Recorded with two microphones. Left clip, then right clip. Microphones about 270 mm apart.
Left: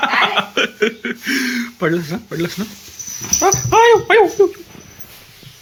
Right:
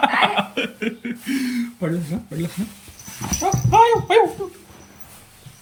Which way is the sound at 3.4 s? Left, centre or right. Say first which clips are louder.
Left 3 dB; centre.